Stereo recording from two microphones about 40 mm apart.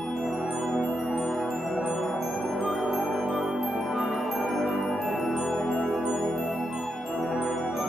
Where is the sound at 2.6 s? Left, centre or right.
Centre.